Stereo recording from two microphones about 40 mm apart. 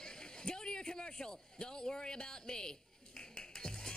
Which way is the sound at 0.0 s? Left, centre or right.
Centre.